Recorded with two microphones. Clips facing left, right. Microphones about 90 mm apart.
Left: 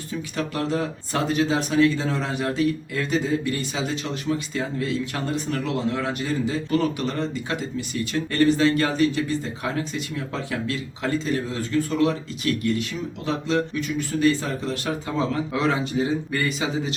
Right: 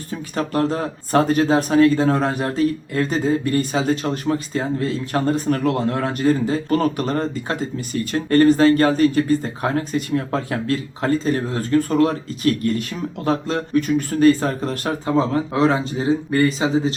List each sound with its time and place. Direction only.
0.1 s speech: 40° right (ahead or behind)